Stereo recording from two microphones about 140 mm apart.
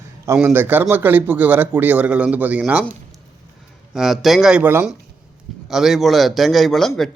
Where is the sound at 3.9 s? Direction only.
Centre (ahead or behind).